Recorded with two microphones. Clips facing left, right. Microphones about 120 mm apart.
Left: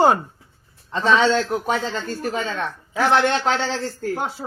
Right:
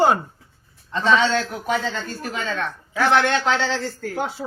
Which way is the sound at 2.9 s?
25° left (ahead or behind).